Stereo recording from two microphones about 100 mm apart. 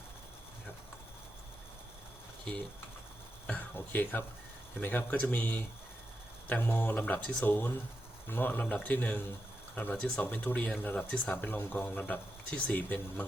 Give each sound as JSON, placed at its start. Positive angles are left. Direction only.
{"t": 3.4, "sound": "speech", "side_deg": 15}